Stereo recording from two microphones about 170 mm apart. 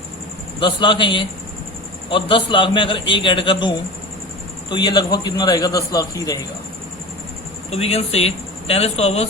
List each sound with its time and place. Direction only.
0.6 s a man's voice: 30° left (ahead or behind)
7.7 s speech: 35° left (ahead or behind)